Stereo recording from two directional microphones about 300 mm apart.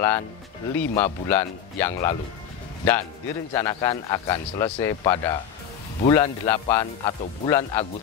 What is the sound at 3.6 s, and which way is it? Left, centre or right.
Speech, centre.